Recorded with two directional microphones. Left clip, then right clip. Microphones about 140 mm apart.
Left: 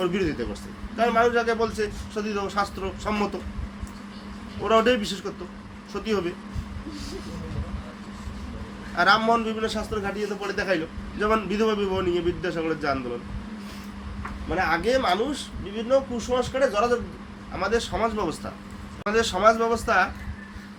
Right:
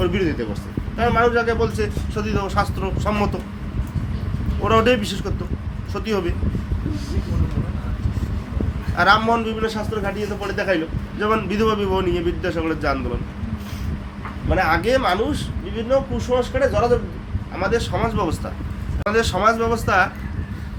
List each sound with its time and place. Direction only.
0.0 s a man's voice: 15° left (ahead or behind)
4.6 s a man's voice: 5° left (ahead or behind)
9.0 s a man's voice: 10° left (ahead or behind)
14.5 s a man's voice: centre (ahead or behind)